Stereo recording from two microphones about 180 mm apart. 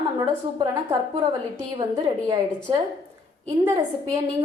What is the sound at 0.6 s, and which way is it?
Speech, 15° right (ahead or behind).